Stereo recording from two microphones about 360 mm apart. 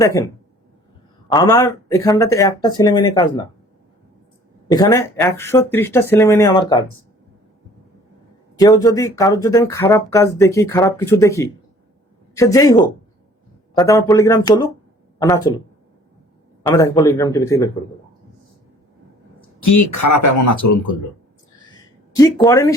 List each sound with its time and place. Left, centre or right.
0.0 s speech: centre
1.3 s speech: centre
4.7 s speech: centre
8.5 s speech: centre
16.6 s speech: centre
19.6 s speech: left
21.8 s a sound: centre